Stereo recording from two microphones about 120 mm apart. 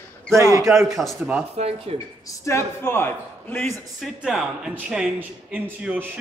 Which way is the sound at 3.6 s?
Centre (ahead or behind).